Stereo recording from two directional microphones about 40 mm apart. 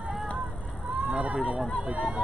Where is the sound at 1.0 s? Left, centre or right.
Right.